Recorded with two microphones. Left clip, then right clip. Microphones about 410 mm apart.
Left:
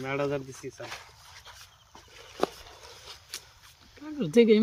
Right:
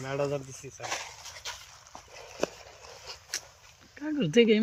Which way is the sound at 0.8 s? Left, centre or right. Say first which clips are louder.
Right 6 dB; centre.